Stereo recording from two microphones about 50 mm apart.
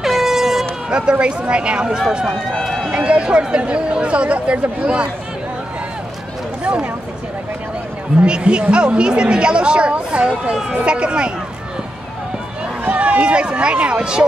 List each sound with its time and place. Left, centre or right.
0.0 s air horn: centre
0.8 s a sound: centre
1.2 s speech: right
3.0 s speech: right
6.6 s speech: right
8.2 s speech: right
12.8 s speech: right